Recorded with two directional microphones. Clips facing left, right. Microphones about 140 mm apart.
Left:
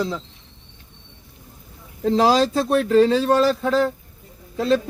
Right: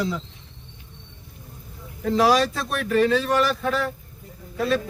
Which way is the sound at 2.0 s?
30° left (ahead or behind).